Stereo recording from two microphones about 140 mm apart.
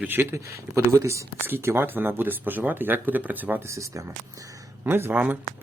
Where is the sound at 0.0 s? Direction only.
15° right (ahead or behind).